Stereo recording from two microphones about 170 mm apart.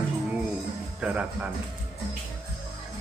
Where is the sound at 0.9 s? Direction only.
5° right (ahead or behind).